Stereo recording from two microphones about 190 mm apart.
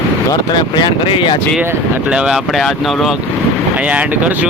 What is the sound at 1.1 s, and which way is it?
Speech, 25° left (ahead or behind).